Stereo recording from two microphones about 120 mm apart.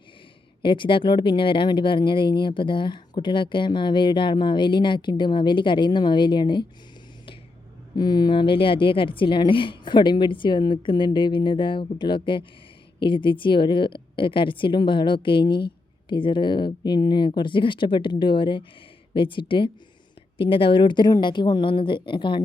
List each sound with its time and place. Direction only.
0.6 s speech: 45° left (ahead or behind)
7.9 s a woman's voice: 35° left (ahead or behind)